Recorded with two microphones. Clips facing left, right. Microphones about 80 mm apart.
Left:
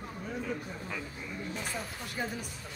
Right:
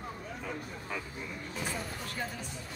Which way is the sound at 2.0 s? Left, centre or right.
Centre.